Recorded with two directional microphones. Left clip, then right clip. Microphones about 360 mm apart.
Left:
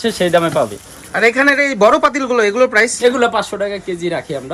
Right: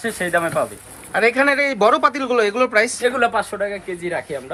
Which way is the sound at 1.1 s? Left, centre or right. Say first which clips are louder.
Left 4 dB; centre.